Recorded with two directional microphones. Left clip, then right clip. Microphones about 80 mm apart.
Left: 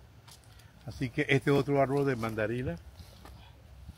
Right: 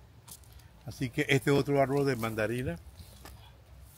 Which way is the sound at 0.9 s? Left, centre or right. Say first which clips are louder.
Even; centre.